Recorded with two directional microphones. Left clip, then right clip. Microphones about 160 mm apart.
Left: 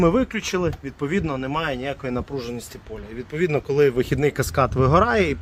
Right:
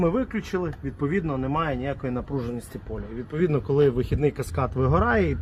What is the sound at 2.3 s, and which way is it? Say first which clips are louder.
Speech: left 1 dB; 20° left (ahead or behind).